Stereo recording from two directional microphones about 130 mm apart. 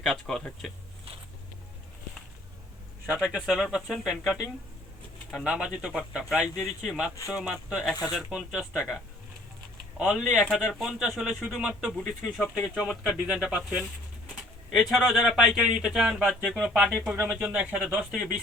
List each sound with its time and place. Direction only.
0.0 s speech: 5° left (ahead or behind)
3.2 s speech: 5° right (ahead or behind)
10.0 s speech: 5° right (ahead or behind)
17.8 s speech: centre (ahead or behind)